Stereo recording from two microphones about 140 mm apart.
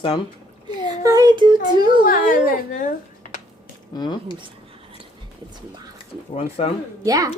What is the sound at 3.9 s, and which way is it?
Speech, 30° left (ahead or behind).